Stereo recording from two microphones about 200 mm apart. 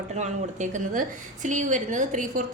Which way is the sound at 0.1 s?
35° right (ahead or behind).